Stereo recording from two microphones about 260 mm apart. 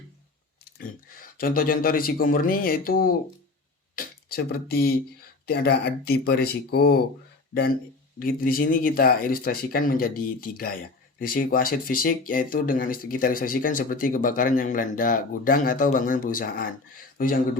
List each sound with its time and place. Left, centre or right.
0.6 s speech: left
8.2 s speech: left